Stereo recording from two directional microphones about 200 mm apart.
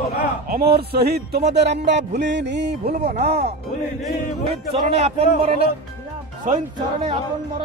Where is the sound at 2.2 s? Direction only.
60° right (ahead or behind).